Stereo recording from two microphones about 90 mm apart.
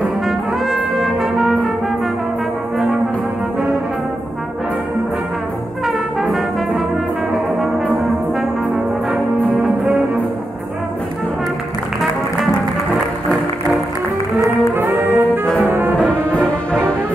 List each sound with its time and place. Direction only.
0.7 s brass instrument: centre (ahead or behind)
5.9 s brass instrument: centre (ahead or behind)
9.5 s music: 20° right (ahead or behind)
14.8 s music: 25° right (ahead or behind)
15.4 s brass instrument: 5° left (ahead or behind)
15.7 s music: 20° right (ahead or behind)
16.3 s music: 10° left (ahead or behind)